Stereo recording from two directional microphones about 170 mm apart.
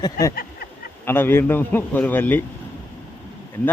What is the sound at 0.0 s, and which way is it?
Speech, 20° left (ahead or behind).